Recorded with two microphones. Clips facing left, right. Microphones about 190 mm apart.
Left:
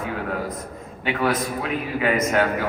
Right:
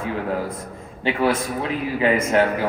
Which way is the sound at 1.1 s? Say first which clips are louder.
Right 2 dB; 30° right (ahead or behind).